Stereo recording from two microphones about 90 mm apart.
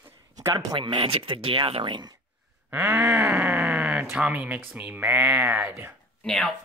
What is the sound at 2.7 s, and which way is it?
Speech, 25° right (ahead or behind).